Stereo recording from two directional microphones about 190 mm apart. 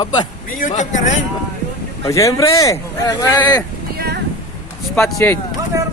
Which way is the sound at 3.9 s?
55° right (ahead or behind).